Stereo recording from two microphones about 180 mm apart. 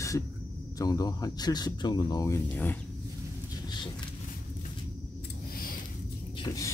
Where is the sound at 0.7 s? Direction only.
20° left (ahead or behind).